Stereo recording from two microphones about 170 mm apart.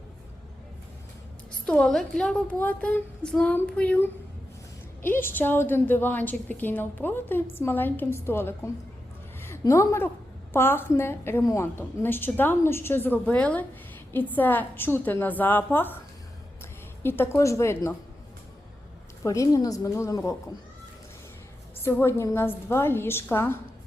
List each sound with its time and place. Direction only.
1.5 s a woman's voice: 5° left (ahead or behind)
17.0 s a woman's voice: 15° left (ahead or behind)
19.2 s a woman's voice: 20° left (ahead or behind)
21.8 s a woman's voice: 15° left (ahead or behind)